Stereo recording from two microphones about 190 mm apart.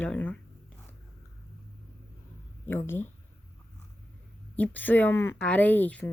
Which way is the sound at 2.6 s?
10° left (ahead or behind).